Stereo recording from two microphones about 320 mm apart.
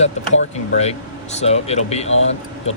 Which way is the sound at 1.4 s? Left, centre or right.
Centre.